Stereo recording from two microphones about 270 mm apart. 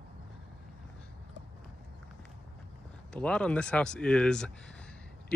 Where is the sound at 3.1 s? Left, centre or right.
Centre.